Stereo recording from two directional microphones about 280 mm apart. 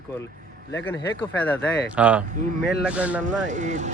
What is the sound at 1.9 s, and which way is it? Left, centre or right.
Speech, centre.